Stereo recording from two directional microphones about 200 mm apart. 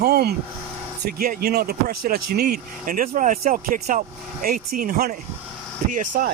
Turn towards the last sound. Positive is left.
turn(degrees=-40)  # may be behind; listen again after turning